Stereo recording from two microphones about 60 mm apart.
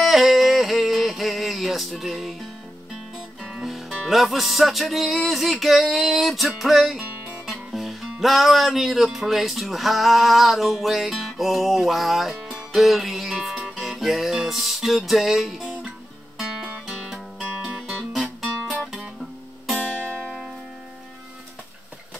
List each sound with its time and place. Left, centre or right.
0.0 s music: centre
3.9 s speech: centre
7.4 s music: centre
8.2 s speech: centre
16.6 s music: centre